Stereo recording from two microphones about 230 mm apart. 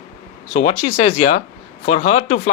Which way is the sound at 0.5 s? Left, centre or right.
Left.